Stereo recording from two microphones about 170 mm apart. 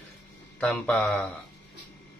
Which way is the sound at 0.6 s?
5° left (ahead or behind).